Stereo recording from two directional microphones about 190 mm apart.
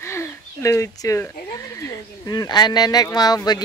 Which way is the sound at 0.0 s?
15° left (ahead or behind).